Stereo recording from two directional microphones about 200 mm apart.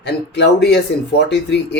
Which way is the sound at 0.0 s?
55° left (ahead or behind).